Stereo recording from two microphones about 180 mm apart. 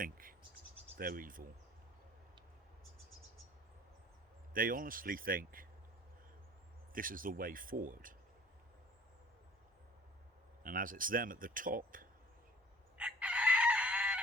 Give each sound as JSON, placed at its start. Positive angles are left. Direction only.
{"t": 0.0, "sound": "insect", "side_deg": -50}
{"t": 0.9, "sound": "speech", "side_deg": -50}
{"t": 4.5, "sound": "speech", "side_deg": -50}
{"t": 6.9, "sound": "speech", "side_deg": -50}
{"t": 10.6, "sound": "speech", "side_deg": -50}
{"t": 13.0, "sound": "chicken", "side_deg": -5}